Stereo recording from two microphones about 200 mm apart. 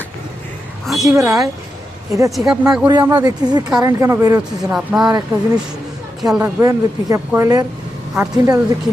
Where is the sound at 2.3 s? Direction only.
Centre (ahead or behind).